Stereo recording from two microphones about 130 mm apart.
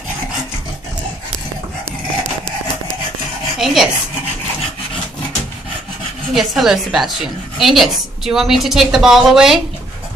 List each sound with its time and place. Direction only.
3.5 s dishes: centre (ahead or behind)
6.3 s a woman's voice: centre (ahead or behind)